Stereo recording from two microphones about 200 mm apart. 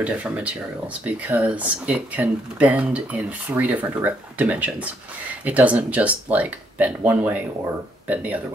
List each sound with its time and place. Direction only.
0.0 s speech: 5° right (ahead or behind)